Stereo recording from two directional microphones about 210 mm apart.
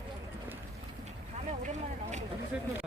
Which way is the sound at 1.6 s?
35° right (ahead or behind).